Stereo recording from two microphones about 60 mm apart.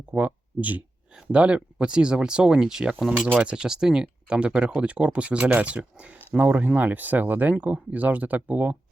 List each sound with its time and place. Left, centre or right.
0.1 s speech: right
6.3 s speech: right